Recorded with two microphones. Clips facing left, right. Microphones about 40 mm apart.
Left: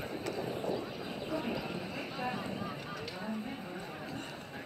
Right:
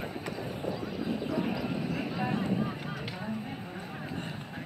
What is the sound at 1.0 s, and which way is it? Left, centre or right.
Horse, centre.